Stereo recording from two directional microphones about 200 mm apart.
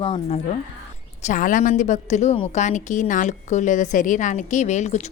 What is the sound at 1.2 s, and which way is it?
A woman's voice, 40° left (ahead or behind).